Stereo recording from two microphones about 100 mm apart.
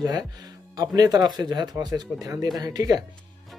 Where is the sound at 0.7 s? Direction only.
40° right (ahead or behind).